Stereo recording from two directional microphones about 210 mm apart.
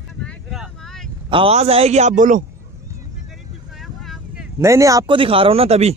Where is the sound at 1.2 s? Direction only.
25° right (ahead or behind).